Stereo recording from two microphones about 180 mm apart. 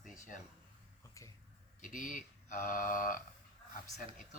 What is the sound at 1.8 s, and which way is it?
Speech, 45° left (ahead or behind).